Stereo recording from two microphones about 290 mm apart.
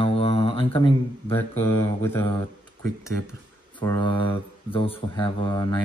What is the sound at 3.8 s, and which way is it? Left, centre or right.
Speech, centre.